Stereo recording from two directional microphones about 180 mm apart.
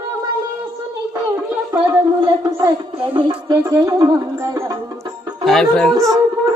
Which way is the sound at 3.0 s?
30° right (ahead or behind).